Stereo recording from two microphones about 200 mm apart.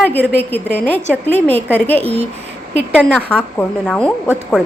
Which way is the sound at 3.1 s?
5° left (ahead or behind).